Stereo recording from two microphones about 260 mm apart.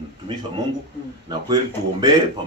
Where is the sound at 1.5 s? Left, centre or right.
Centre.